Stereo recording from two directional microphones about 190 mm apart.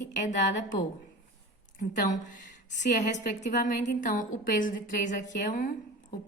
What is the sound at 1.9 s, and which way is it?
A woman's voice, 45° left (ahead or behind).